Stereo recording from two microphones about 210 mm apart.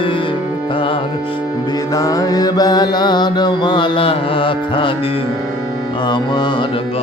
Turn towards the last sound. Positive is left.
turn(degrees=20)  # may be behind; listen again after turning